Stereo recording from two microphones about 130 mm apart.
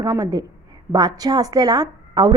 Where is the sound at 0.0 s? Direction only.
30° right (ahead or behind).